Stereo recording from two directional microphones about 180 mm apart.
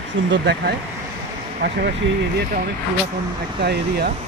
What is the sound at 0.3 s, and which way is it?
Speech, 70° right (ahead or behind).